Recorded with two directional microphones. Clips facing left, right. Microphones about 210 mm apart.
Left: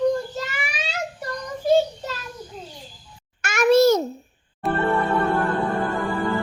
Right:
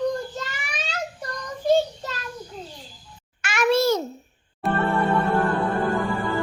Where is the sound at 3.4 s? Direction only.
45° left (ahead or behind).